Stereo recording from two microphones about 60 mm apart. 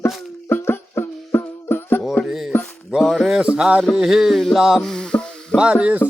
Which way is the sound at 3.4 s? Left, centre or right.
Centre.